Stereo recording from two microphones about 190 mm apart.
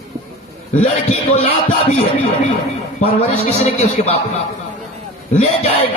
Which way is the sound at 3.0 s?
30° left (ahead or behind).